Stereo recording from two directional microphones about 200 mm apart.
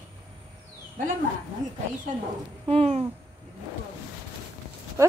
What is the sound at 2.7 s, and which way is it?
Speech, 30° right (ahead or behind).